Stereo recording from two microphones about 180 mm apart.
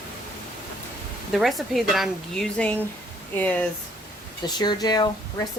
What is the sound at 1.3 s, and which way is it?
Speech, centre (ahead or behind).